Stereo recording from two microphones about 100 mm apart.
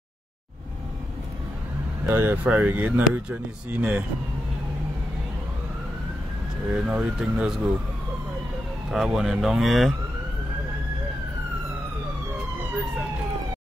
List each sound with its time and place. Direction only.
2.0 s speech: 20° right (ahead or behind)
6.7 s speech: 5° right (ahead or behind)
8.9 s speech: centre (ahead or behind)